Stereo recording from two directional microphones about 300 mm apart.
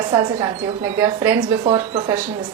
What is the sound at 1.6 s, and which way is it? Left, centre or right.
Speech, centre.